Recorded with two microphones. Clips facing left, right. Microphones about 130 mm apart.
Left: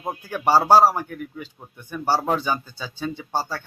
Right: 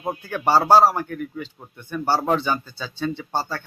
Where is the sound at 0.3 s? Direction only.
10° left (ahead or behind).